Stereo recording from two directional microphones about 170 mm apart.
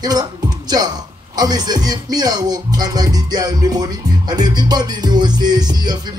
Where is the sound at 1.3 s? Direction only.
25° right (ahead or behind).